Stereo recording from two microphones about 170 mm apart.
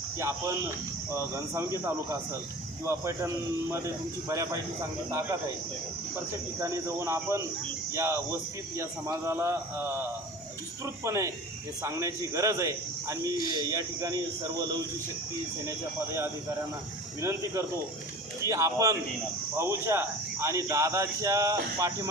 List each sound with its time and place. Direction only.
0.2 s speech: 15° right (ahead or behind)
6.6 s a man's voice: 15° right (ahead or behind)
17.2 s speech: 15° right (ahead or behind)